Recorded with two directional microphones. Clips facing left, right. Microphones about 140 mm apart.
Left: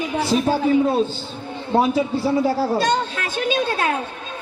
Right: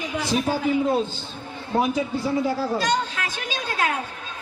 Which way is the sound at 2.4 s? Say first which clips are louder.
Left 4 dB; 30° left (ahead or behind).